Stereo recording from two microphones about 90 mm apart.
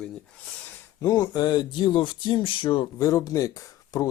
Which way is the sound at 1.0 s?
45° left (ahead or behind).